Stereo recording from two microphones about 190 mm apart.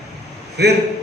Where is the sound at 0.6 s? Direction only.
60° right (ahead or behind).